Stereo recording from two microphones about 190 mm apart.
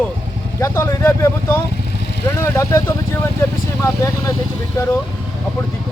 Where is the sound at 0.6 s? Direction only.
15° left (ahead or behind).